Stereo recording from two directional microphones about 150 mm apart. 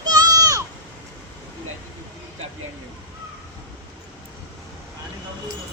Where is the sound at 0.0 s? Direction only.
25° right (ahead or behind).